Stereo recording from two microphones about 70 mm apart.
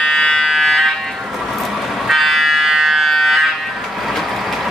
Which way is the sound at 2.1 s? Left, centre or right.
Centre.